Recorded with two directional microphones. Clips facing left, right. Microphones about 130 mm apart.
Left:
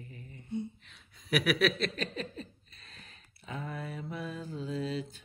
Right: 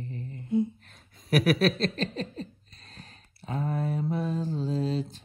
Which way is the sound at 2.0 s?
30° right (ahead or behind).